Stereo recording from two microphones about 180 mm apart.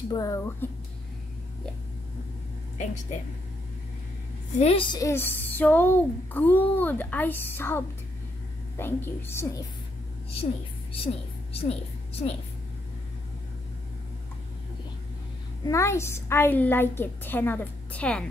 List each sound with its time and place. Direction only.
0.1 s speech: 20° left (ahead or behind)
4.6 s a woman's voice: 30° left (ahead or behind); by 9.5 s 15° left (ahead or behind)
10.3 s a woman's voice: 30° left (ahead or behind)
12.1 s a woman's voice: 35° left (ahead or behind)
15.6 s a woman's voice: 15° left (ahead or behind)